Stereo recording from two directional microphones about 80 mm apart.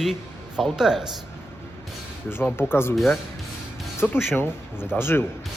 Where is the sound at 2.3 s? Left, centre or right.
Left.